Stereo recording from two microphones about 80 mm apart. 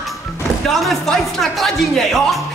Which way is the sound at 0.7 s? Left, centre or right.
Centre.